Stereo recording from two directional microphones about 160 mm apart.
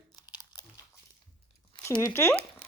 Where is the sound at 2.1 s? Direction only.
15° left (ahead or behind).